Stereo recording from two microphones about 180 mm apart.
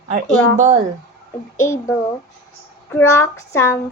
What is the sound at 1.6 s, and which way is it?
Female singing, 15° left (ahead or behind).